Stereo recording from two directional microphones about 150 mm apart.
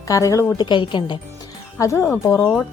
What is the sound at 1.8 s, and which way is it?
Speech, 20° left (ahead or behind).